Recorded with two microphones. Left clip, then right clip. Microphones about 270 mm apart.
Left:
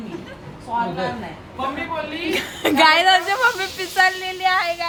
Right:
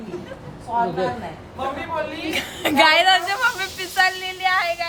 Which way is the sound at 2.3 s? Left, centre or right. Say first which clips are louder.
Even; centre.